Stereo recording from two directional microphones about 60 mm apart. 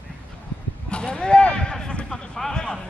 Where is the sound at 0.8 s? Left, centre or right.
Centre.